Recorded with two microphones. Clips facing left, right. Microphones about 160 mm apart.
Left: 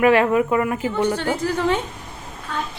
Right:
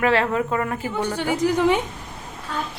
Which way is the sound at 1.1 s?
15° right (ahead or behind).